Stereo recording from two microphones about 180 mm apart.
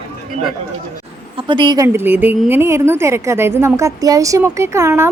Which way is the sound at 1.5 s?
25° right (ahead or behind).